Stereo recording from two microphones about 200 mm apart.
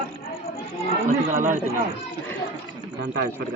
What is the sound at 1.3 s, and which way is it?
Speech, 40° right (ahead or behind).